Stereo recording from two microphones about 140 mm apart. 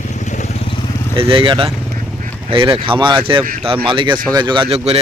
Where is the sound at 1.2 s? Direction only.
40° right (ahead or behind).